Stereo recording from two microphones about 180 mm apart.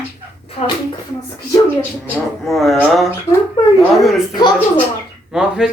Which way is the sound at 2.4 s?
Centre (ahead or behind).